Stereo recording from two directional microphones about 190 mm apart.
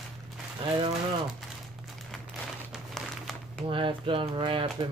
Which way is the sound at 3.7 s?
25° right (ahead or behind).